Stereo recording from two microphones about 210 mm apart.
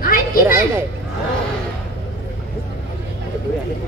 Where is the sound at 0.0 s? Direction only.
45° left (ahead or behind).